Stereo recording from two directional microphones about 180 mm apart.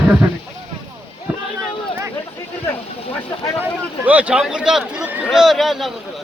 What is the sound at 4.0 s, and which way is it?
A man's voice, 10° right (ahead or behind).